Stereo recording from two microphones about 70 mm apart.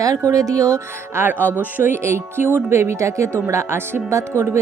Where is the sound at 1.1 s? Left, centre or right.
Right.